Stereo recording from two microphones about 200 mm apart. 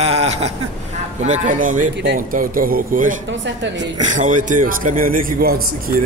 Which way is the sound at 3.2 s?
65° right (ahead or behind).